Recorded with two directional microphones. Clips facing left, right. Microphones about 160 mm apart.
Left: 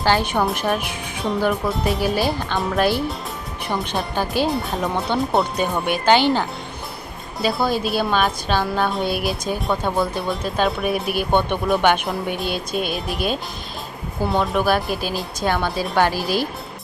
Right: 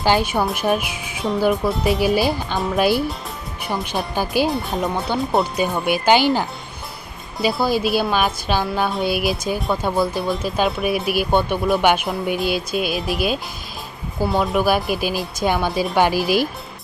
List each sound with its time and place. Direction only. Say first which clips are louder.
0.0 s speech: right 1 dB; 10° right (ahead or behind)